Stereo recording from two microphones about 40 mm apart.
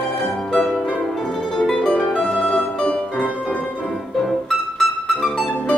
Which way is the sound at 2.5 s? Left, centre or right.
Left.